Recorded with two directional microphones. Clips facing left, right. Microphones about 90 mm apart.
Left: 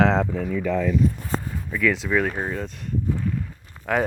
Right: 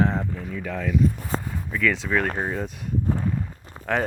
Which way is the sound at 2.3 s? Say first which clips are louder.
Right 1 dB; 10° right (ahead or behind).